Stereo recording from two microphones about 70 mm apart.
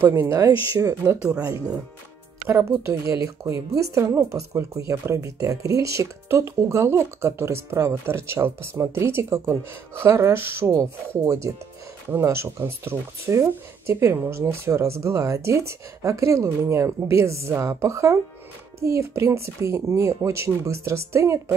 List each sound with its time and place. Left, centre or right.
0.0 s speech: right
1.2 s speech: centre
2.4 s speech: right